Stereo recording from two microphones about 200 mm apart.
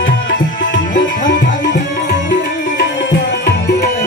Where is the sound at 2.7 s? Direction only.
55° left (ahead or behind).